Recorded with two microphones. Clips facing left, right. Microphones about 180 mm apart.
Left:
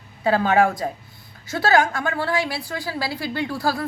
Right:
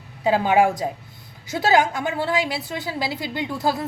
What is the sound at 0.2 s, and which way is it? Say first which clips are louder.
A woman's voice: even; 15° right (ahead or behind).